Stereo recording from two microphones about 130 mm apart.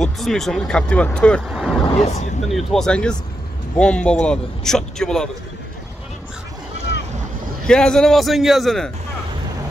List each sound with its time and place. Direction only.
0.0 s speech: 5° left (ahead or behind)
1.5 s speech: 5° right (ahead or behind)
1.9 s speech: 55° left (ahead or behind)
2.4 s a man's voice: centre (ahead or behind)
7.6 s a man's voice: 5° left (ahead or behind)